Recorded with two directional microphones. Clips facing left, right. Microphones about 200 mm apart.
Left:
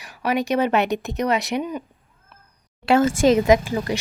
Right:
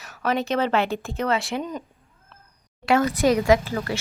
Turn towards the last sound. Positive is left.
turn(degrees=15)  # may be behind; listen again after turning